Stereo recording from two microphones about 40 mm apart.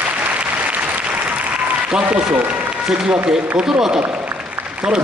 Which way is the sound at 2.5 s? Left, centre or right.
Right.